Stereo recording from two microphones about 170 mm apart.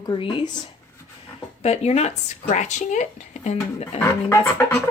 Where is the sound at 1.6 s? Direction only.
40° left (ahead or behind).